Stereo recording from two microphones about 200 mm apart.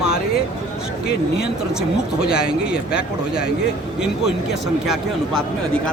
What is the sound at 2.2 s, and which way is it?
Speech, 5° right (ahead or behind).